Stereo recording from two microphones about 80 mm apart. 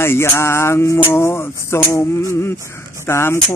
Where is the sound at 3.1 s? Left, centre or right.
Left.